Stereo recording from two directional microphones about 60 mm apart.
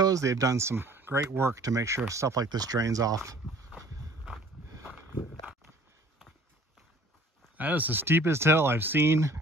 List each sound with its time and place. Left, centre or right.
0.0 s speech: right
1.6 s speech: right
2.0 s speech: right
7.5 s speech: right